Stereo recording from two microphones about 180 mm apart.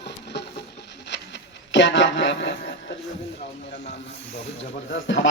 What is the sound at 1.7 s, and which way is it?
Speech, 90° left.